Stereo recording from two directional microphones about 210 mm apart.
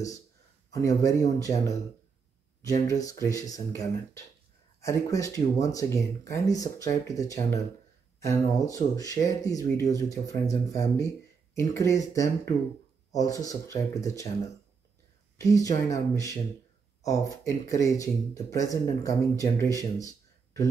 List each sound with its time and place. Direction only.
0.7 s speech: 15° left (ahead or behind)
2.9 s speech: 15° left (ahead or behind)
15.3 s speech: 15° left (ahead or behind)
20.0 s a sound: 15° left (ahead or behind)